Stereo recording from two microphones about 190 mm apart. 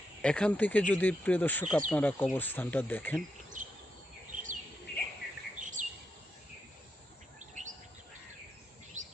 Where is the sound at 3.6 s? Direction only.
40° right (ahead or behind).